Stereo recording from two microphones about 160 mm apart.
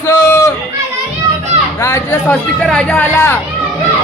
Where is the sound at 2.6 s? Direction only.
5° left (ahead or behind).